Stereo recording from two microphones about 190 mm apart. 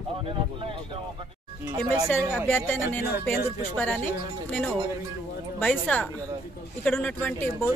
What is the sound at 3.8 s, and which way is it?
Speech, 10° left (ahead or behind).